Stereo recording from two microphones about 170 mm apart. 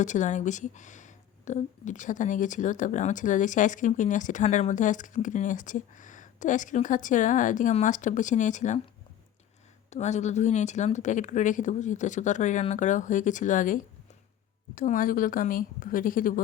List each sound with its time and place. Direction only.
0.0 s speech: 45° left (ahead or behind)
9.9 s speech: 40° left (ahead or behind)
14.8 s speech: 55° left (ahead or behind)